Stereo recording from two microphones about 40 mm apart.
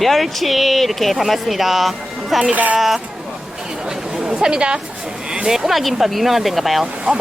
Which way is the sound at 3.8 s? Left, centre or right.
Centre.